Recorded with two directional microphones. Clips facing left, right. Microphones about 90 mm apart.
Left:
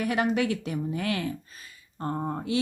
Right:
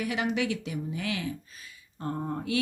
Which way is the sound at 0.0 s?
45° left (ahead or behind).